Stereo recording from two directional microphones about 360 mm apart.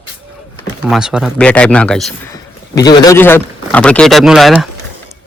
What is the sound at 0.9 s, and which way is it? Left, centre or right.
Speech, centre.